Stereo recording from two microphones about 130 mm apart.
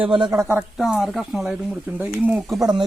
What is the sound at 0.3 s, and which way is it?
Speech, 25° right (ahead or behind).